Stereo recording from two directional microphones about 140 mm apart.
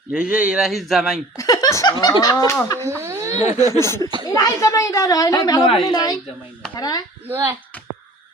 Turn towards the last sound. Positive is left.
turn(degrees=-20)  # may be behind; listen again after turning